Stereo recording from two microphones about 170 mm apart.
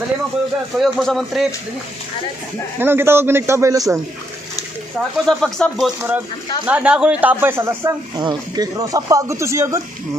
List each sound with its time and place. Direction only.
0.7 s speech: centre (ahead or behind)
2.8 s speech: 15° right (ahead or behind)
5.1 s speech: centre (ahead or behind); by 9.8 s 15° right (ahead or behind)